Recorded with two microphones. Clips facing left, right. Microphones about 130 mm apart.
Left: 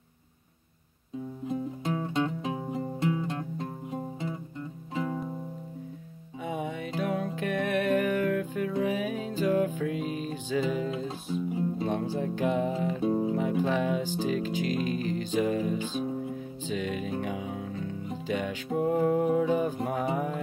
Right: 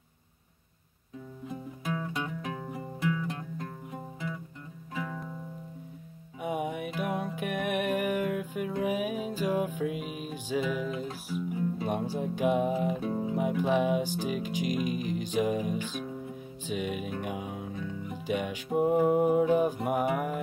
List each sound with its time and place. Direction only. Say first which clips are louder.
1.5 s music: left 4 dB; 30° left (ahead or behind)
6.4 s music: right 1 dB; 15° right (ahead or behind)
11.1 s music: left 3 dB; 25° left (ahead or behind)
11.8 s music: left 2 dB; 15° right (ahead or behind)
13.0 s music: left 5 dB; 25° left (ahead or behind)
13.3 s music: even; 15° right (ahead or behind)